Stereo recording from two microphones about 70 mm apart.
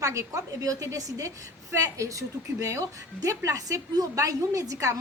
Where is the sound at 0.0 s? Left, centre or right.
Right.